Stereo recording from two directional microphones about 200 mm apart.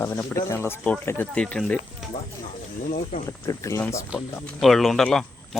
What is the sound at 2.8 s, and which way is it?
Speech, 40° left (ahead or behind).